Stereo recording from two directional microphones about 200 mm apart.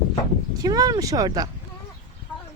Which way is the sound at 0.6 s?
20° right (ahead or behind).